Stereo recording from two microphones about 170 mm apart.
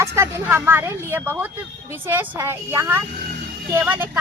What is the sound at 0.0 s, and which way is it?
Speech, 15° right (ahead or behind).